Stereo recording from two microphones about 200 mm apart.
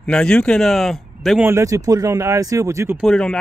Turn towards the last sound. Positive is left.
turn(degrees=5)  # may be behind; listen again after turning